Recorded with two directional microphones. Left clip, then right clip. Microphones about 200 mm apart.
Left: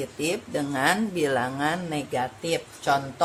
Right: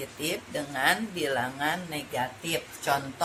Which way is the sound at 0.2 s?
50° left (ahead or behind).